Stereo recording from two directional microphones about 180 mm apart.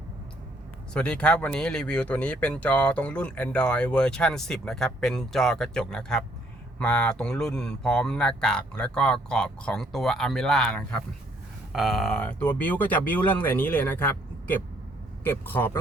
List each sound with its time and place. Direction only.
0.9 s speech: 5° left (ahead or behind)